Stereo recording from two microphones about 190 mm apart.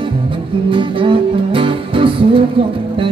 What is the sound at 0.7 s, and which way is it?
Music, 25° right (ahead or behind).